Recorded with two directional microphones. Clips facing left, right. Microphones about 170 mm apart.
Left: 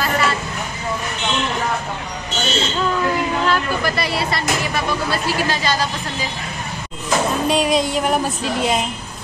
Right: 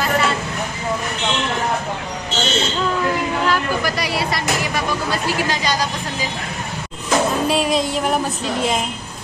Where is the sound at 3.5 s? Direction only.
10° right (ahead or behind).